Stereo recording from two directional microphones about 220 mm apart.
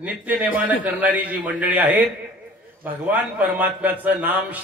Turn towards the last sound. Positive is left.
turn(degrees=-10)  # may be behind; listen again after turning